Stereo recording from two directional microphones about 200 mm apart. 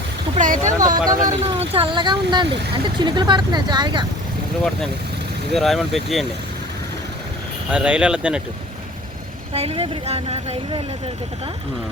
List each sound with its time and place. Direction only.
0.3 s a sound: 40° right (ahead or behind)
0.7 s speech: 15° right (ahead or behind)
1.2 s speech: 30° right (ahead or behind)
5.5 s speech: centre (ahead or behind)
7.7 s speech: 5° right (ahead or behind)
9.5 s speech: 30° right (ahead or behind)